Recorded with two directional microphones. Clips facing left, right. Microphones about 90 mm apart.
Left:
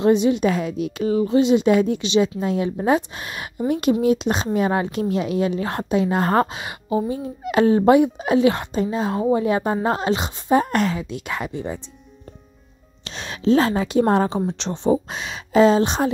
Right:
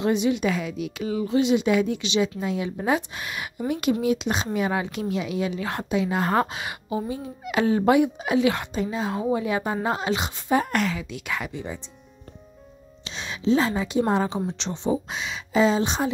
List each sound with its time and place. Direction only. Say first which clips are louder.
0.0 s a woman's voice: left 5 dB; 35° left (ahead or behind)
6.5 s a woman's voice: left 5 dB; 30° left (ahead or behind)
13.0 s a woman's voice: left 4 dB; 55° left (ahead or behind)